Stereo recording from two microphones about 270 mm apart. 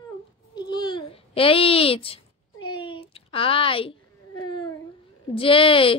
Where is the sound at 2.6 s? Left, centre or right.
Centre.